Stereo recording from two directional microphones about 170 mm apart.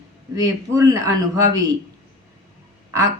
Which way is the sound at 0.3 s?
20° right (ahead or behind).